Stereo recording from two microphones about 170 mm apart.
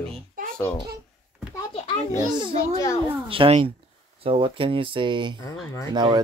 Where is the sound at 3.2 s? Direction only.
30° right (ahead or behind).